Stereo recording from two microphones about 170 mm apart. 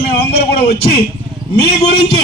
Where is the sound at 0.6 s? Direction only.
70° left (ahead or behind).